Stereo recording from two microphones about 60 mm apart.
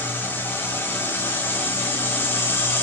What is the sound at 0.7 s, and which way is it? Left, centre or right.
Music, left.